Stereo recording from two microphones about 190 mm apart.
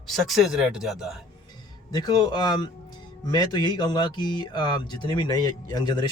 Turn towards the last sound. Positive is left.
turn(degrees=20)  # may be behind; listen again after turning